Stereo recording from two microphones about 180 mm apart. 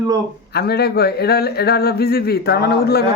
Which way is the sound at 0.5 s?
60° left (ahead or behind).